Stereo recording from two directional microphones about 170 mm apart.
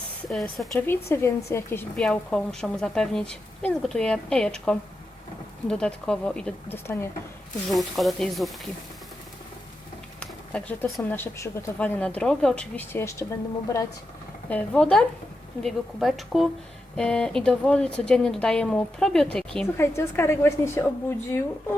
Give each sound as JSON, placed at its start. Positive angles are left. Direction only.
{"t": 0.3, "sound": "a woman's voice", "side_deg": 0}
{"t": 0.9, "sound": "speech", "side_deg": 15}
{"t": 2.0, "sound": "a woman's voice", "side_deg": 5}
{"t": 7.7, "sound": "a woman's voice", "side_deg": 0}
{"t": 10.2, "sound": "a sound", "side_deg": 10}
{"t": 11.1, "sound": "speech", "side_deg": 15}
{"t": 14.5, "sound": "a woman's voice", "side_deg": 5}
{"t": 19.7, "sound": "speech", "side_deg": 15}